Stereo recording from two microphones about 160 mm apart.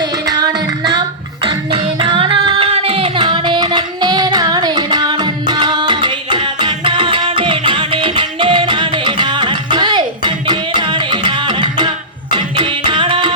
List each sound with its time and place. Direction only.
0.0 s music: 25° right (ahead or behind)